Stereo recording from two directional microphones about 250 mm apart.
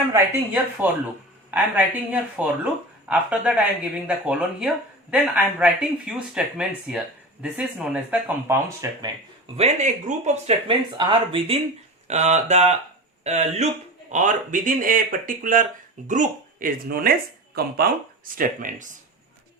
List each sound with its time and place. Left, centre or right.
0.1 s speech: centre
9.6 s speech: right